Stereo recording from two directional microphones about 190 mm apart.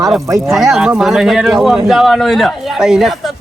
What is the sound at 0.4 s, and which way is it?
Speech, centre (ahead or behind).